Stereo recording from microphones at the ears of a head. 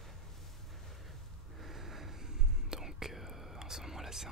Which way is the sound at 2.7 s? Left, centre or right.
Centre.